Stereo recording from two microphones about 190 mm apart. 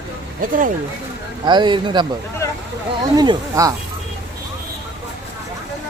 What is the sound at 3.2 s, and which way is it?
Speech, 20° right (ahead or behind).